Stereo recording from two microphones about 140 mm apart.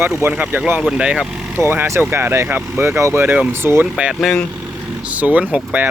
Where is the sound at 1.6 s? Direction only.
15° right (ahead or behind).